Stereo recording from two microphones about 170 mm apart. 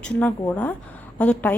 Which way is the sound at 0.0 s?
10° left (ahead or behind).